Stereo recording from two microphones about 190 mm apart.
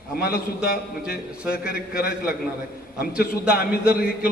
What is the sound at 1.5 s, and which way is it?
Speech, 50° left (ahead or behind).